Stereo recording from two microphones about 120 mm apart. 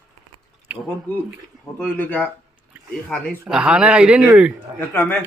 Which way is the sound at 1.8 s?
15° left (ahead or behind).